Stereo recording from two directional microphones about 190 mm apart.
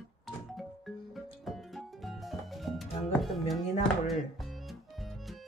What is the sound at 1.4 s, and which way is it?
Music, centre (ahead or behind).